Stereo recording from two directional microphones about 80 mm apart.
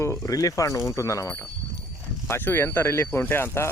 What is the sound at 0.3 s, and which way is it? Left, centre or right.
Speech, left.